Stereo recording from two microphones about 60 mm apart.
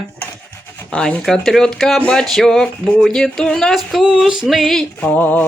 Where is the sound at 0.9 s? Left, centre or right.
Centre.